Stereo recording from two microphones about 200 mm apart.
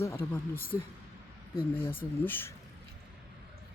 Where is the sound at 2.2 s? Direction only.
10° left (ahead or behind).